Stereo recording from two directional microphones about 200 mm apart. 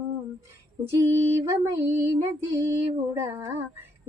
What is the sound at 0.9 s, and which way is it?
Female singing, 15° right (ahead or behind).